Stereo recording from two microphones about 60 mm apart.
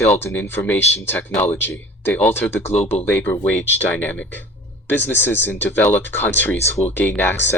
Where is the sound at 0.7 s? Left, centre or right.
Left.